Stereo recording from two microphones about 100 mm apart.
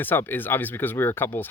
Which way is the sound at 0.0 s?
20° left (ahead or behind).